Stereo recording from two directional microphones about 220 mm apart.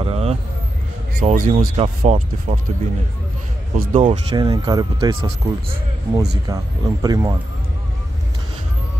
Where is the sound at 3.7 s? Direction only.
40° right (ahead or behind).